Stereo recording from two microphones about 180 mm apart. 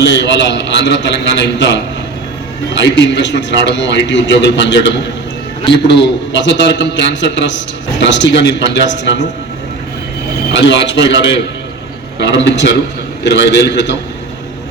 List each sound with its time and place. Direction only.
0.0 s a man's voice: 75° left (ahead or behind)
2.8 s a man's voice: 80° left
10.5 s a man's voice: 85° left